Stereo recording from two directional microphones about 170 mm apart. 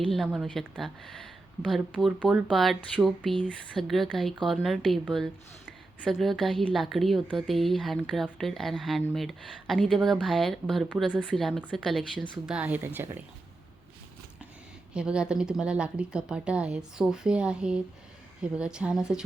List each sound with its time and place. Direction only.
0.1 s a woman's voice: centre (ahead or behind)
12.5 s speech: 10° right (ahead or behind)
14.9 s a woman's voice: 5° right (ahead or behind)